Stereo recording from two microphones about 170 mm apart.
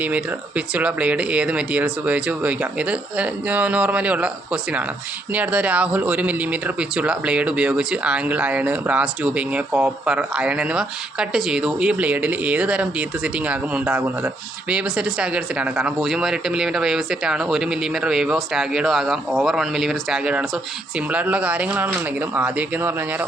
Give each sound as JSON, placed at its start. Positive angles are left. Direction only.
{"t": 0.0, "sound": "speech", "side_deg": -10}